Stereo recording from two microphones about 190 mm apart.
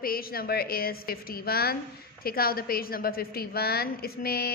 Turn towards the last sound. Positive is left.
turn(degrees=55)  # may be behind; listen again after turning